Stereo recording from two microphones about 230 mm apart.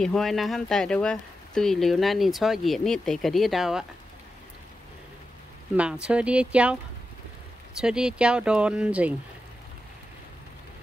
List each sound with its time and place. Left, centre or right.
0.0 s speech: centre
5.8 s speech: centre